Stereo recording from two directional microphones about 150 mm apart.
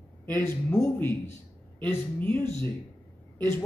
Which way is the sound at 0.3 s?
15° left (ahead or behind).